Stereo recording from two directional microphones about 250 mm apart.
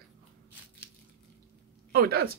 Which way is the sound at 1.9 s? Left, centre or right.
Right.